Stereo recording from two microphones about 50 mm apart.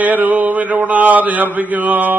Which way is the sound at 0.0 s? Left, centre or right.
Right.